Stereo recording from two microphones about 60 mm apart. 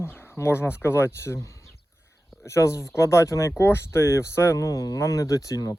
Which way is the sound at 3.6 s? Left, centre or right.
Left.